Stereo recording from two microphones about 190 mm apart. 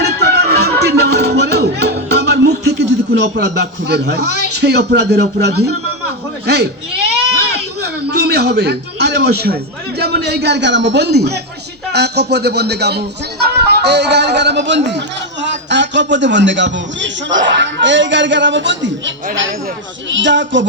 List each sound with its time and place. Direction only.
0.0 s music: 60° right (ahead or behind)
3.3 s a man's voice: 60° right (ahead or behind)
6.4 s baby cry: 60° right (ahead or behind)
10.0 s a man's voice: 60° right (ahead or behind)